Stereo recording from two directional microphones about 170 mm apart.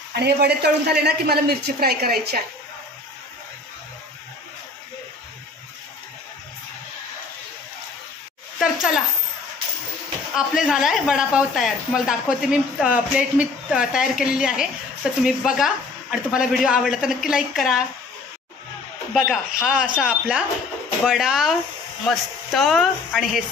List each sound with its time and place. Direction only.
0.1 s a woman's voice: 75° right (ahead or behind)
8.5 s speech: centre (ahead or behind)
10.3 s speech: centre (ahead or behind)
19.1 s speech: centre (ahead or behind)